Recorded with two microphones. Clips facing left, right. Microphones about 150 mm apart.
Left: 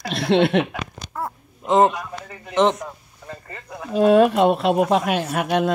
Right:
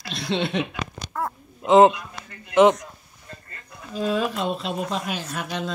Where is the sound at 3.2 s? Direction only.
90° left.